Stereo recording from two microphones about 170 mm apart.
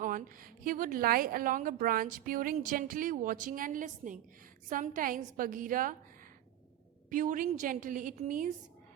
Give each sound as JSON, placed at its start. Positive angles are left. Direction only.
{"t": 0.6, "sound": "a woman's voice", "side_deg": -55}
{"t": 7.1, "sound": "a woman's voice", "side_deg": -50}